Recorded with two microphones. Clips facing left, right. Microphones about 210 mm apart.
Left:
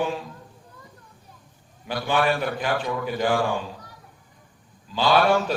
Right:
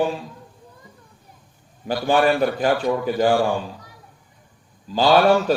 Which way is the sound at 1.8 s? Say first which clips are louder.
Right 5 dB; 40° right (ahead or behind).